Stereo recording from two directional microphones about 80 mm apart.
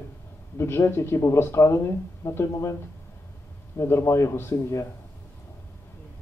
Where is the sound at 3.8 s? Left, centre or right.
Left.